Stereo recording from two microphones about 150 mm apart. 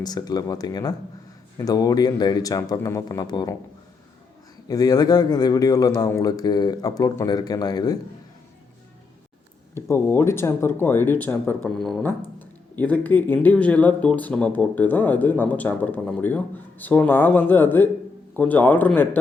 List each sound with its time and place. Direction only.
0.0 s a man's voice: 25° left (ahead or behind)
4.7 s a man's voice: 25° left (ahead or behind)
9.7 s speech: 20° left (ahead or behind)